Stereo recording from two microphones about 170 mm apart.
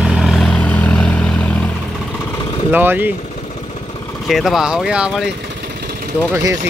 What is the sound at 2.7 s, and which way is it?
Speech, 10° right (ahead or behind).